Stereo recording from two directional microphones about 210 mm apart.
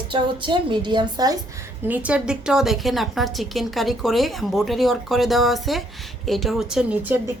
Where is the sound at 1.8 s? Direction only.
5° right (ahead or behind).